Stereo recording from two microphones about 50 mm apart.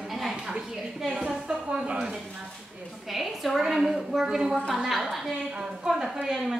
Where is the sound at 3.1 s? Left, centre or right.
Centre.